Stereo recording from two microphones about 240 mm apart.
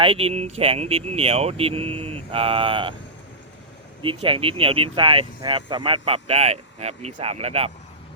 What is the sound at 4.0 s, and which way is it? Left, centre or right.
Speech, right.